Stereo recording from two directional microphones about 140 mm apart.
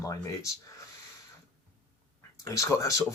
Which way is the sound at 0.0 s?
20° left (ahead or behind).